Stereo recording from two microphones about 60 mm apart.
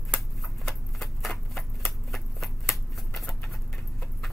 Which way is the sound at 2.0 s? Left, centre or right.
Centre.